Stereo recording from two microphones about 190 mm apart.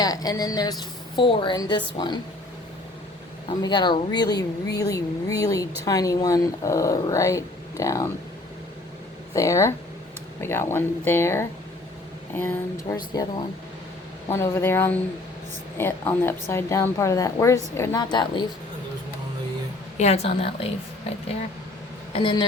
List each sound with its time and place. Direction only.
0.0 s a woman's voice: 20° left (ahead or behind)
3.6 s a woman's voice: 25° left (ahead or behind)
9.3 s a woman's voice: 15° left (ahead or behind)
20.0 s a woman's voice: 35° left (ahead or behind)
22.1 s a woman's voice: 25° left (ahead or behind)